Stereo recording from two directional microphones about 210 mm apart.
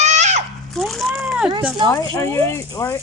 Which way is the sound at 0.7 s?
Centre (ahead or behind).